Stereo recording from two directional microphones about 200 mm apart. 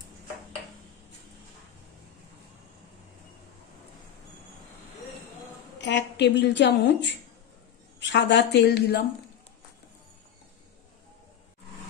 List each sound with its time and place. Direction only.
5.8 s a woman's voice: 60° left (ahead or behind)